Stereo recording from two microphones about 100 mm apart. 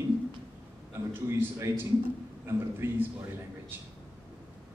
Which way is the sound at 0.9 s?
25° right (ahead or behind).